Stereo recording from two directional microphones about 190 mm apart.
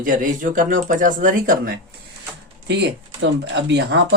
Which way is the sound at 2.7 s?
65° right (ahead or behind).